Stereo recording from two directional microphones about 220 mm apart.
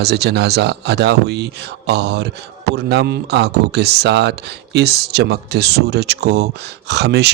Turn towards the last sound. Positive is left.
turn(degrees=-50)  # may be behind; listen again after turning